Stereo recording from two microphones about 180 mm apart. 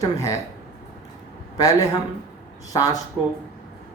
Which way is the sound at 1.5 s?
20° left (ahead or behind).